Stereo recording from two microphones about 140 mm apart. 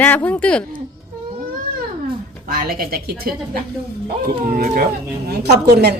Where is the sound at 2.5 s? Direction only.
90° right.